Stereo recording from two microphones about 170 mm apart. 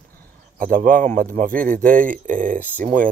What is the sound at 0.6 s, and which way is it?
Speech, 55° right (ahead or behind).